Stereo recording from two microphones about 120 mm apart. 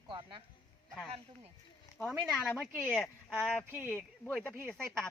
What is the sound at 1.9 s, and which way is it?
Speech, centre (ahead or behind).